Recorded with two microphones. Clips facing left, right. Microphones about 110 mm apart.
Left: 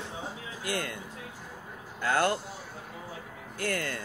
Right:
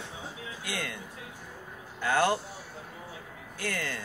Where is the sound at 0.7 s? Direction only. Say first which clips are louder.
Left 4 dB; 40° left (ahead or behind).